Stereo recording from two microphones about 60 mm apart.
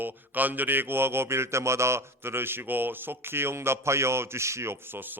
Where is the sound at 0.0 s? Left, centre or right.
Right.